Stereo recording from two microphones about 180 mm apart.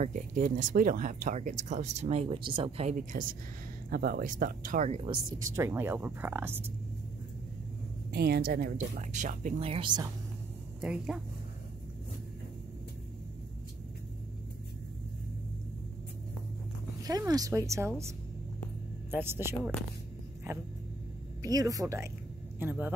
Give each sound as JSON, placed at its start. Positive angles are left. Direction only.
{"t": 0.0, "sound": "speech", "side_deg": -45}
{"t": 5.6, "sound": "speech", "side_deg": -15}
{"t": 8.1, "sound": "speech", "side_deg": -60}
{"t": 9.6, "sound": "speech", "side_deg": -30}
{"t": 10.8, "sound": "speech", "side_deg": -5}
{"t": 17.0, "sound": "speech", "side_deg": -20}
{"t": 21.4, "sound": "speech", "side_deg": -20}